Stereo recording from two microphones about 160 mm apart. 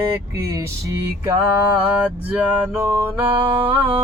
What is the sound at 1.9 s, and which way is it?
Music, 10° right (ahead or behind).